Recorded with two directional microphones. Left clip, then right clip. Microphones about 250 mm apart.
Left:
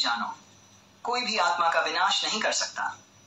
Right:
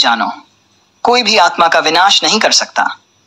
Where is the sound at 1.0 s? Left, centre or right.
Right.